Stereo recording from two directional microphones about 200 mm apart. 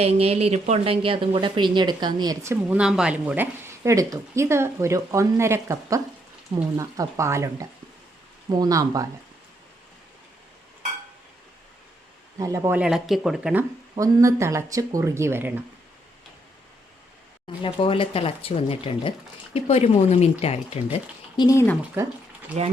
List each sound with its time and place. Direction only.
0.0 s speech: 30° right (ahead or behind)
12.4 s speech: 15° right (ahead or behind)
17.6 s speech: 25° left (ahead or behind)
21.3 s speech: 15° left (ahead or behind)